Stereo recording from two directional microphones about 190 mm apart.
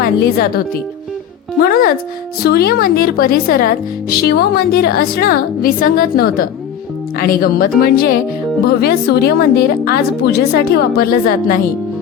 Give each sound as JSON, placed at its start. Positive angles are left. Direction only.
{"t": 0.0, "sound": "speech", "side_deg": 50}
{"t": 1.6, "sound": "a woman's voice", "side_deg": 50}